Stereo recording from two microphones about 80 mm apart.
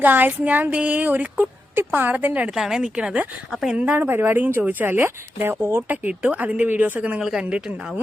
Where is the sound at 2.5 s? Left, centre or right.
Centre; by 5.9 s right.